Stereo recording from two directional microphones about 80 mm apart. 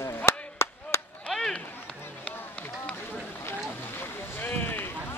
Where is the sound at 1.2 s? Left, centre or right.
Centre.